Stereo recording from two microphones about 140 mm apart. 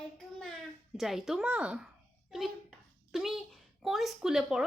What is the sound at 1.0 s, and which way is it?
A child's voice, centre (ahead or behind).